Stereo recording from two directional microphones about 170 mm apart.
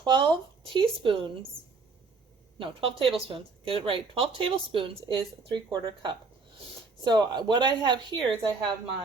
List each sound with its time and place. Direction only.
0.0 s speech: 25° right (ahead or behind)
2.6 s speech: 35° right (ahead or behind)